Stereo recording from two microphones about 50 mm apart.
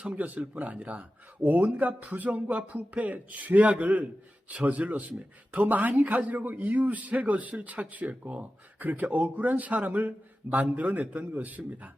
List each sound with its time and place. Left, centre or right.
0.0 s speech: right